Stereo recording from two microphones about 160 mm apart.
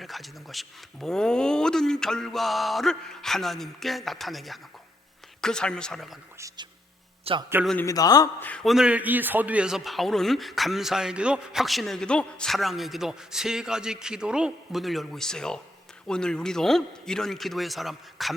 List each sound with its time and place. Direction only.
0.0 s a man's voice: centre (ahead or behind)
7.3 s a man's voice: 35° right (ahead or behind)
7.8 s a man's voice: 20° left (ahead or behind)
8.4 s a man's voice: 10° left (ahead or behind)